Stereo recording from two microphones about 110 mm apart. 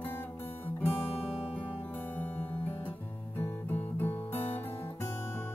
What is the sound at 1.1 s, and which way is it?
Music, 65° left (ahead or behind).